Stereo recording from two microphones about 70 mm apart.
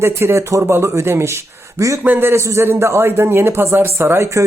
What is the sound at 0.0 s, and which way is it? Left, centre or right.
A man's voice, right.